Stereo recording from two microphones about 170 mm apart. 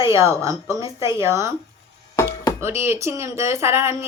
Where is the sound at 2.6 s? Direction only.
15° right (ahead or behind).